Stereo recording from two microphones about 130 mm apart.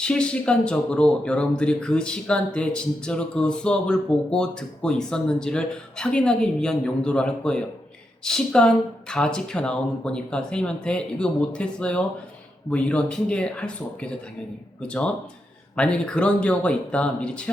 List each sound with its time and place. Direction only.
0.0 s speech: 5° left (ahead or behind)